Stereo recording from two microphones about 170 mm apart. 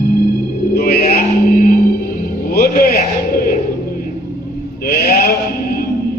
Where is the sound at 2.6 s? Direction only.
60° left (ahead or behind).